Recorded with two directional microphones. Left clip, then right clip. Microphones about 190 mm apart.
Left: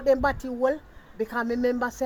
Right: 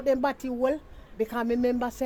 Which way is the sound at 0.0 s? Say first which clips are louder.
Left 3 dB; 25° right (ahead or behind).